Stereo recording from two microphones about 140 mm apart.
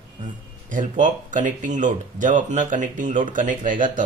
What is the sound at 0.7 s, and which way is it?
Speech, 65° right (ahead or behind).